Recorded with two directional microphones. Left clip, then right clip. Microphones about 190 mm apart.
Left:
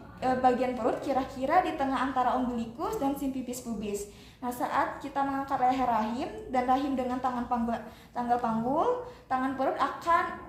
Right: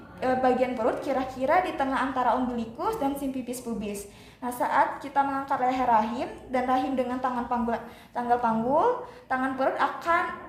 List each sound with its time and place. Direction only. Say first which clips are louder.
0.2 s a woman's voice: right 2 dB; 25° right (ahead or behind)